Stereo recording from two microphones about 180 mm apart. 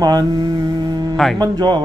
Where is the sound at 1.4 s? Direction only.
25° right (ahead or behind).